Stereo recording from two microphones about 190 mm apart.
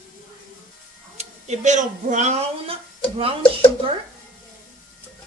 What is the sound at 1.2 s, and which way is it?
Speech, 40° right (ahead or behind).